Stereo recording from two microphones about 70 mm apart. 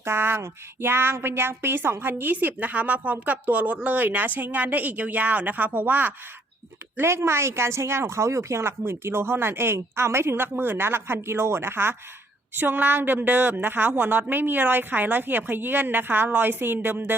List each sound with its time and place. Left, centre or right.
0.0 s a woman's voice: right
6.9 s a woman's voice: right